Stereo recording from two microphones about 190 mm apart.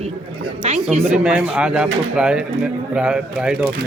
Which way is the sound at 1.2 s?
5° right (ahead or behind).